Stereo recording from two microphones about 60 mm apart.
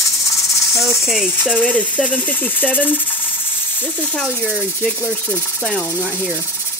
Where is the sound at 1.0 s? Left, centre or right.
Centre.